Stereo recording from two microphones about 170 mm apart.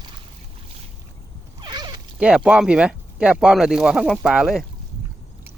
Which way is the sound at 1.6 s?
25° right (ahead or behind).